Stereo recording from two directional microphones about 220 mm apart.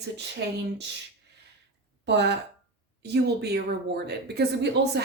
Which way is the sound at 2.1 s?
50° right (ahead or behind).